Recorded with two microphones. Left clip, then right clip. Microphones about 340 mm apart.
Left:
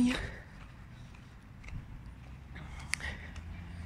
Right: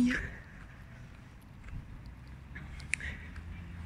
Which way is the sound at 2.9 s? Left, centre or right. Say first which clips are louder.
Right 1 dB; centre.